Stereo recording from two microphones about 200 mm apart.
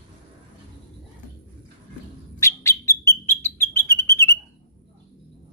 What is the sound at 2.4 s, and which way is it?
Bird, 15° left (ahead or behind).